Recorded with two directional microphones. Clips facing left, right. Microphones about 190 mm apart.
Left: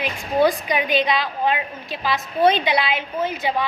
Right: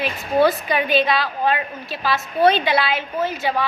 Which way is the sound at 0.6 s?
15° left (ahead or behind).